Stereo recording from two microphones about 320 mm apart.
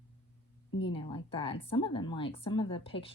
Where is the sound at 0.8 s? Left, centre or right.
Centre.